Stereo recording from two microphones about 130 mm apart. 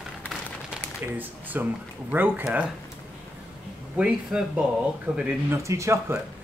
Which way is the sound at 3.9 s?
5° right (ahead or behind).